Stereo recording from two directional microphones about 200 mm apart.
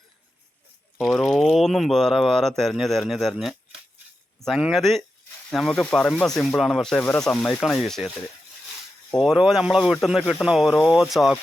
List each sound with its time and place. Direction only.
0.9 s speech: 5° left (ahead or behind)
9.1 s speech: centre (ahead or behind)